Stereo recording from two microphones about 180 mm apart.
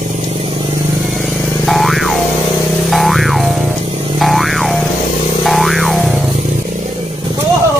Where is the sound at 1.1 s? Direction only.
Centre (ahead or behind).